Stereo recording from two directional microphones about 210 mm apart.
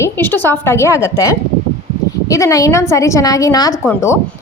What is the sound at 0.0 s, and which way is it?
Speech, 10° left (ahead or behind).